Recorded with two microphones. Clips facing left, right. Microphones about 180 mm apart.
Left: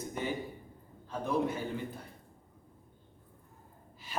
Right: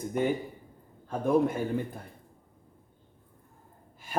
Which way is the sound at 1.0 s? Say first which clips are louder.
Right 7 dB; 50° right (ahead or behind).